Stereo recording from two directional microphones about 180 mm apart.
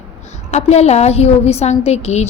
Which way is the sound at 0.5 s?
40° left (ahead or behind).